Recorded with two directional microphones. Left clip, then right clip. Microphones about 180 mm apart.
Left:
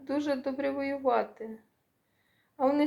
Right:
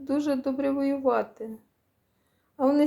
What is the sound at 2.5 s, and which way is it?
Speech, 35° right (ahead or behind).